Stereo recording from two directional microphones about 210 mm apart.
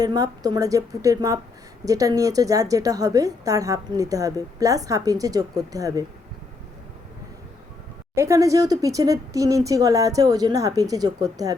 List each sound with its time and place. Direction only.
0.0 s a woman's voice: 20° right (ahead or behind)
8.1 s a woman's voice: 15° right (ahead or behind)